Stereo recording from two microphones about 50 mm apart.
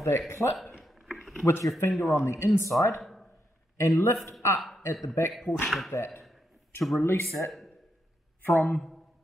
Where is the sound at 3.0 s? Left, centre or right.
Centre.